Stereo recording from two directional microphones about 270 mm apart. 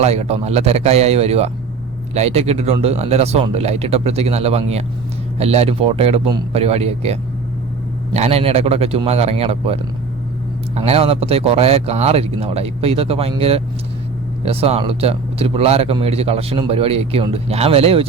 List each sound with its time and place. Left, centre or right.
0.0 s speech: right